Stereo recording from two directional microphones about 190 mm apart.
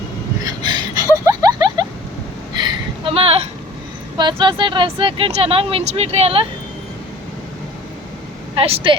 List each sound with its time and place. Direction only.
0.4 s gasp: 20° right (ahead or behind)
1.2 s a sound: 20° right (ahead or behind)
4.2 s speech: 25° right (ahead or behind)
8.5 s speech: 30° right (ahead or behind)